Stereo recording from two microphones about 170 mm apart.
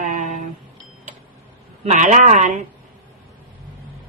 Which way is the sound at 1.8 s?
50° right (ahead or behind).